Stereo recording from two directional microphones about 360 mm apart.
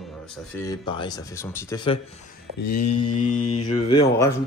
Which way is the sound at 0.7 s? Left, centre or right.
Centre.